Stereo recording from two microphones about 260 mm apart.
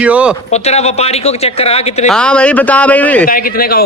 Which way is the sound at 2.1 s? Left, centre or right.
Centre.